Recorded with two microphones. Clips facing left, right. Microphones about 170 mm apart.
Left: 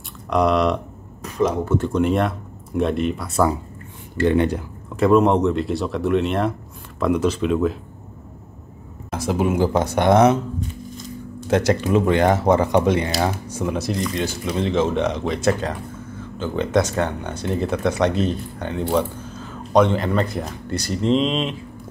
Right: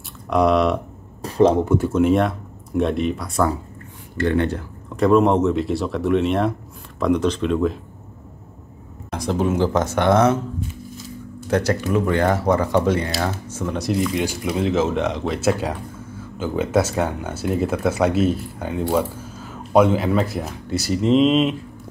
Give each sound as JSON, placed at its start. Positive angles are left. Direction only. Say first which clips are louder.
{"t": 0.3, "sound": "speech", "louder": "right 1 dB", "side_deg": 0}
{"t": 1.2, "sound": "speech", "louder": "right 5 dB", "side_deg": -30}
{"t": 1.7, "sound": "speech", "louder": "right 2 dB", "side_deg": -5}
{"t": 4.2, "sound": "speech", "louder": "left 2 dB", "side_deg": 15}
{"t": 4.9, "sound": "speech", "louder": "even", "side_deg": 0}
{"t": 9.1, "sound": "speech", "louder": "even", "side_deg": 5}
{"t": 11.5, "sound": "speech", "louder": "left 2 dB", "side_deg": 20}
{"t": 13.7, "sound": "speech", "louder": "right 5 dB", "side_deg": 0}